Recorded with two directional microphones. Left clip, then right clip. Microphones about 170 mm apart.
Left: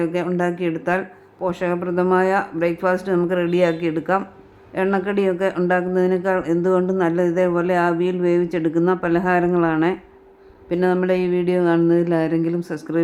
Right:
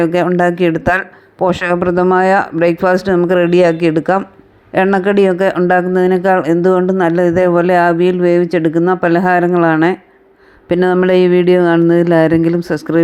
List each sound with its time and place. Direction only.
0.0 s speech: 40° right (ahead or behind)
10.7 s speech: 40° right (ahead or behind)